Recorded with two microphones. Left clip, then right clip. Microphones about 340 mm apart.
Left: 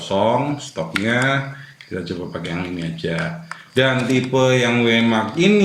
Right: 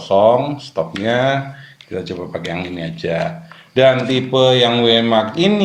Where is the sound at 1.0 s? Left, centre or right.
Centre.